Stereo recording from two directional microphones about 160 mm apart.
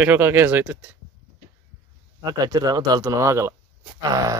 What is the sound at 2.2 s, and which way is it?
Speech, 25° right (ahead or behind).